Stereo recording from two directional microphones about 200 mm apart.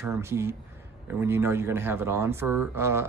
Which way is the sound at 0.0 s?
15° right (ahead or behind).